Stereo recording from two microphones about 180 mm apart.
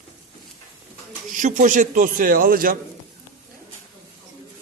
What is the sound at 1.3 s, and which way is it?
A man's voice, 45° right (ahead or behind).